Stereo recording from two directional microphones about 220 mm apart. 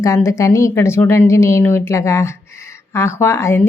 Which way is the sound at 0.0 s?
15° left (ahead or behind).